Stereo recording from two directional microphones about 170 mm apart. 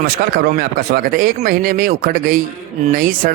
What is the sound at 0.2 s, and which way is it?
Speech, 65° right (ahead or behind).